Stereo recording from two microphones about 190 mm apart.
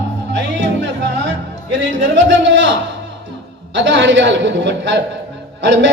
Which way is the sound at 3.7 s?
70° right (ahead or behind).